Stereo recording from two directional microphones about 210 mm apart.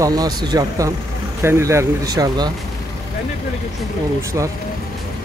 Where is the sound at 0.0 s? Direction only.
20° right (ahead or behind).